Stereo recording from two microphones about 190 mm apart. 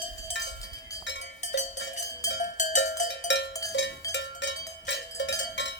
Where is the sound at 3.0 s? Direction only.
70° left (ahead or behind).